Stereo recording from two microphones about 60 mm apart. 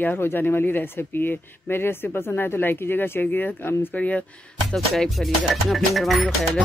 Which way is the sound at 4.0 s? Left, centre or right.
Left.